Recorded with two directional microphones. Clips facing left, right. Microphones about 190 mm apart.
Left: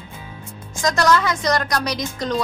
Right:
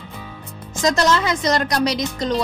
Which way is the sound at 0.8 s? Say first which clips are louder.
Even; 25° right (ahead or behind).